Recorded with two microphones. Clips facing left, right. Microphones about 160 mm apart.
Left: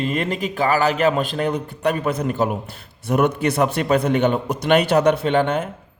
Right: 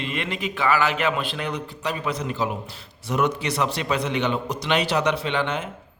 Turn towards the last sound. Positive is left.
turn(degrees=45)  # may be behind; listen again after turning